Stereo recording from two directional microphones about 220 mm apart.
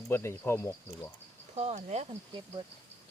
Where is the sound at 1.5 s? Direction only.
30° right (ahead or behind).